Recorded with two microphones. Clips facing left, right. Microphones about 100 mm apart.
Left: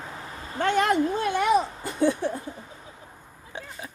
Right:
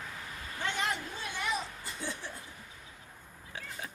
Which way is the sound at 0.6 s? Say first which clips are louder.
Left 12 dB; 60° left (ahead or behind).